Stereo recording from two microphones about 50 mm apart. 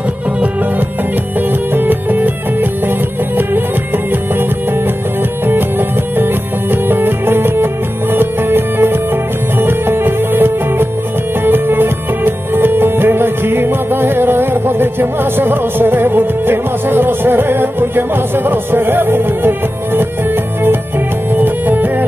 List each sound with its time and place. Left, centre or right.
1.7 s music: right
5.5 s music: right